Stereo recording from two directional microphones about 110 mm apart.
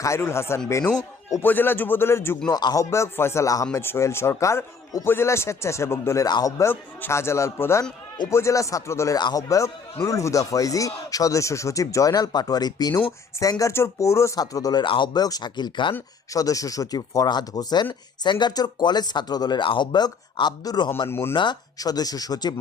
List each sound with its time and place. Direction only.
0.0 s speech: 25° left (ahead or behind)
2.5 s speech: 35° left (ahead or behind)
2.9 s speech: 25° left (ahead or behind); by 16.0 s 45° left (ahead or behind)
16.3 s speech: 30° left (ahead or behind)
21.1 s speech: 20° left (ahead or behind)
21.3 s speech: 40° left (ahead or behind)